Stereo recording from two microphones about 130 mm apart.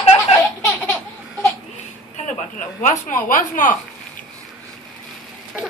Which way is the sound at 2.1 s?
65° left (ahead or behind).